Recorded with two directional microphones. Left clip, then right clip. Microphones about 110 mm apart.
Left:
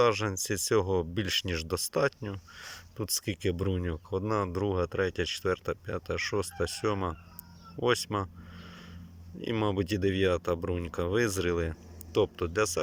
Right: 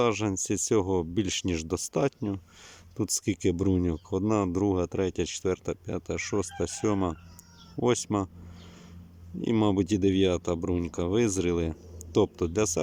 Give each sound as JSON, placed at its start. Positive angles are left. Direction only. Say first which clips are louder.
{"t": 0.0, "sound": "speech", "louder": "even", "side_deg": -30}
{"t": 9.4, "sound": "speech", "louder": "right 4 dB", "side_deg": -35}